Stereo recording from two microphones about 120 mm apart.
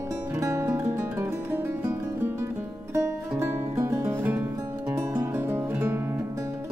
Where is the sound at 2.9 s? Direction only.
20° right (ahead or behind).